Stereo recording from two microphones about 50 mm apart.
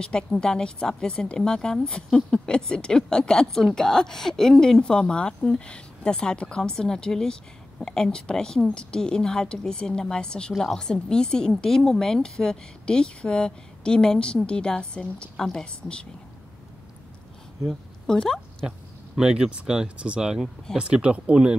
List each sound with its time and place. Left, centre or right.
0.0 s speech: centre
18.0 s speech: centre
19.1 s speech: centre